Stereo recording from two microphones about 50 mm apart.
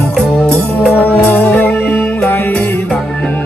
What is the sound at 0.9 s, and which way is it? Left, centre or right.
Music, left.